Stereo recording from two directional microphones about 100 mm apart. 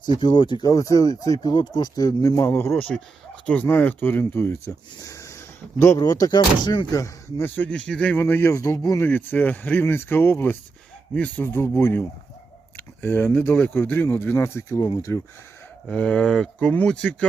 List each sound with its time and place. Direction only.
0.1 s speech: 50° left (ahead or behind); by 6.0 s 30° left (ahead or behind)
6.0 s speech: 40° left (ahead or behind)
6.9 s speech: 35° left (ahead or behind)
7.4 s speech: 15° left (ahead or behind)
8.2 s speech: 25° left (ahead or behind)
9.0 s speech: 20° left (ahead or behind)
14.8 s speech: 40° left (ahead or behind)
15.9 s speech: 10° left (ahead or behind)